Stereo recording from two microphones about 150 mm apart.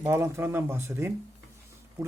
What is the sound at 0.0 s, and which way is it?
Speech, 20° right (ahead or behind).